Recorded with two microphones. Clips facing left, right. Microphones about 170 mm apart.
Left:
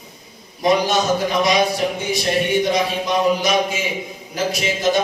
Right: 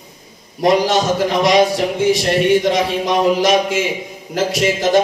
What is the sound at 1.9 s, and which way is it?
A man's voice, 90° right.